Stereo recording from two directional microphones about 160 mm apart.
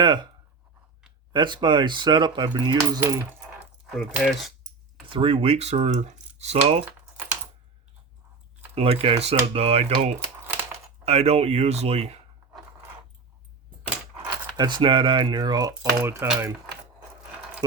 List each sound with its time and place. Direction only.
0.0 s speech: 30° right (ahead or behind)
1.3 s speech: 30° right (ahead or behind)
3.0 s coin: 15° right (ahead or behind)
3.9 s speech: 5° right (ahead or behind)
5.0 s speech: 35° right (ahead or behind)
8.7 s speech: 35° right (ahead or behind)
14.5 s speech: 30° right (ahead or behind)